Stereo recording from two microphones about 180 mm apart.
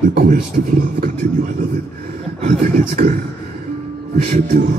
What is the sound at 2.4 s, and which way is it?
Speech, 35° right (ahead or behind).